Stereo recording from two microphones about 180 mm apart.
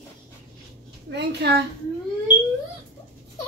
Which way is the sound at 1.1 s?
70° right (ahead or behind).